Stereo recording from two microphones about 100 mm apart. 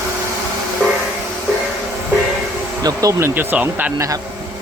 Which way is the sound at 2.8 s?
35° right (ahead or behind).